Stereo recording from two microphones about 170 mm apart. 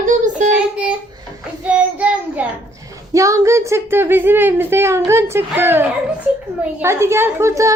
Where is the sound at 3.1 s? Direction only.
20° right (ahead or behind).